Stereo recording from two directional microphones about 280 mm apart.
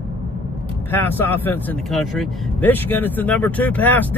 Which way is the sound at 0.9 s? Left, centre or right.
Centre.